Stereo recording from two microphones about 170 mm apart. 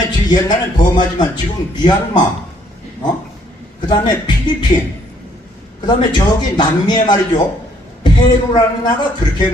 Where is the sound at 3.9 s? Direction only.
25° left (ahead or behind).